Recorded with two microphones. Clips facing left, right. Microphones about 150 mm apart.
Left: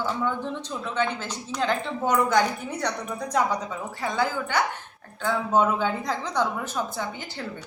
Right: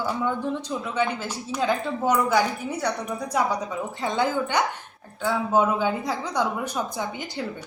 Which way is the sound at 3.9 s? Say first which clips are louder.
Right 1 dB; 20° right (ahead or behind).